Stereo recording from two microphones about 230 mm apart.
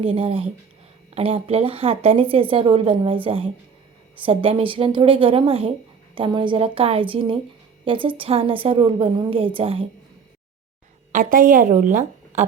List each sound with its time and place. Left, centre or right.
0.0 s a woman's voice: right
11.1 s a woman's voice: right